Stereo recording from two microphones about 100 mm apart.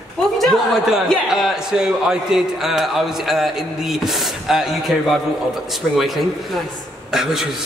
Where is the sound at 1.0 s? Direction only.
5° right (ahead or behind).